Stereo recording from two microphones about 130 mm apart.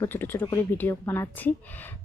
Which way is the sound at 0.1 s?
15° left (ahead or behind).